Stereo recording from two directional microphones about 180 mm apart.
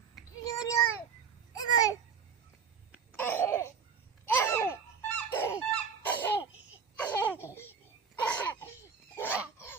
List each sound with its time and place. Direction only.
0.4 s a sound: 20° left (ahead or behind)
1.5 s babbling: 20° left (ahead or behind)
3.1 s babbling: 10° left (ahead or behind)
4.3 s squeak: 10° left (ahead or behind)
6.2 s laughter: 10° left (ahead or behind)
7.4 s babbling: 15° left (ahead or behind)
8.2 s laughter: 10° left (ahead or behind)